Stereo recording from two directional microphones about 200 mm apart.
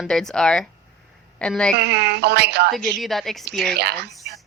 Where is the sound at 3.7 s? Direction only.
55° right (ahead or behind).